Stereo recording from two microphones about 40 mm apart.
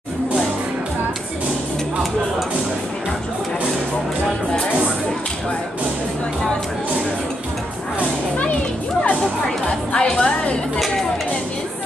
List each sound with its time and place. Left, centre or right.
9.7 s music: left